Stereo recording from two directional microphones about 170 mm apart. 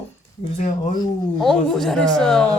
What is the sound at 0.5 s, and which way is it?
Speech, 40° left (ahead or behind).